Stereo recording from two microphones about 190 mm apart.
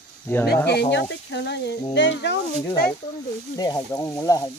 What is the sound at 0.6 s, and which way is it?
Speech, 65° left (ahead or behind).